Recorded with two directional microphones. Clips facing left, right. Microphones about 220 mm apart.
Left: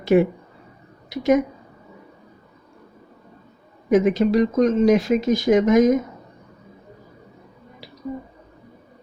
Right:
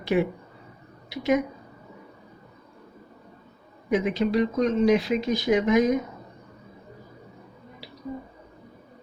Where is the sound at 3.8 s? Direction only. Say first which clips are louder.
Left 7 dB; 45° left (ahead or behind).